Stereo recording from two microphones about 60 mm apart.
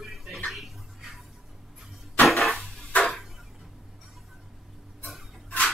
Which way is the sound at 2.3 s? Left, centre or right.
Centre.